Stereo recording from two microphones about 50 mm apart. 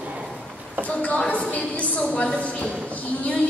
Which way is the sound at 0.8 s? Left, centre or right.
Left.